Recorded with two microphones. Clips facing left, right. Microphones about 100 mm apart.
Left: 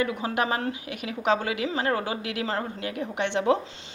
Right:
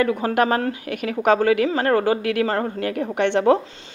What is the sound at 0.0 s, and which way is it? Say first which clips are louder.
Speech: right 7 dB; 50° right (ahead or behind).